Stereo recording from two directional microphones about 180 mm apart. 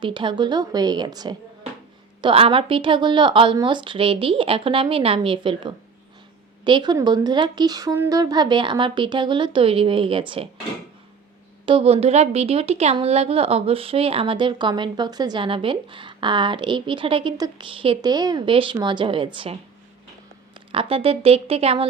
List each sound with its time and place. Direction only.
0.0 s a woman's voice: 25° right (ahead or behind)
11.6 s a woman's voice: 30° right (ahead or behind)